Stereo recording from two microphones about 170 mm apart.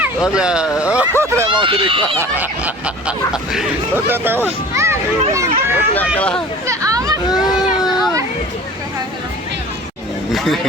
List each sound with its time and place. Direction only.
0.0 s speech: 5° right (ahead or behind)
1.5 s speech: 30° right (ahead or behind)
2.4 s a child's voice: 10° right (ahead or behind)
6.1 s speech: 5° left (ahead or behind)
6.7 s hubbub: 20° right (ahead or behind)
7.3 s a sound: 25° left (ahead or behind)
10.3 s speech: centre (ahead or behind)